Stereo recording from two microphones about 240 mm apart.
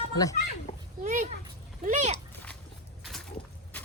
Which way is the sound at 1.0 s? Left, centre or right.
Right.